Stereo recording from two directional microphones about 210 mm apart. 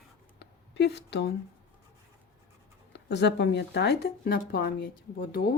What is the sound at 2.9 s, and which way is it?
Speech, 55° left (ahead or behind).